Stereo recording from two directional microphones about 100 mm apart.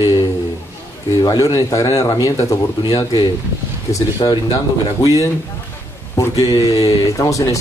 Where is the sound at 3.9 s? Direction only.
35° left (ahead or behind).